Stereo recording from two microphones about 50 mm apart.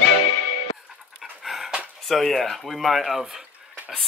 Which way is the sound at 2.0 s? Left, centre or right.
Centre.